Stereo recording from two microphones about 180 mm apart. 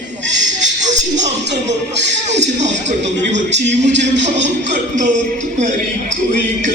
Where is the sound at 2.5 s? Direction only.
40° right (ahead or behind).